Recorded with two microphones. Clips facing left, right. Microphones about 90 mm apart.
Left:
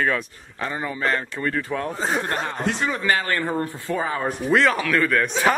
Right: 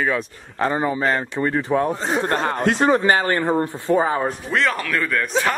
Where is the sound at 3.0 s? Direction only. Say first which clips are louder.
Right 4 dB; 30° right (ahead or behind).